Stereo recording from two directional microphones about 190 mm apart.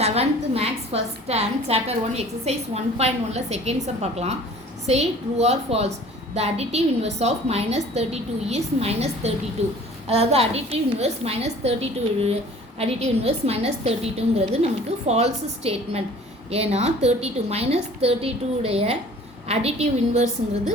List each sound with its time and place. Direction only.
0.0 s a woman's voice: 35° right (ahead or behind)